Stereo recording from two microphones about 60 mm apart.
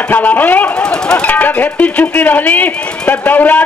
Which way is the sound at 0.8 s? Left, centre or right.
Centre.